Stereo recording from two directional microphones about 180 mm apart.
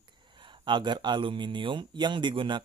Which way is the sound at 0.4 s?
25° right (ahead or behind).